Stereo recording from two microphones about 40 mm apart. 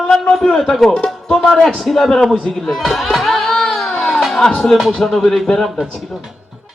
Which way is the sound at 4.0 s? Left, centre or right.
Centre.